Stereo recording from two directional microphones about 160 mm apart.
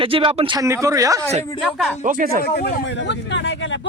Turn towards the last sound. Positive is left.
turn(degrees=75)  # may be behind; listen again after turning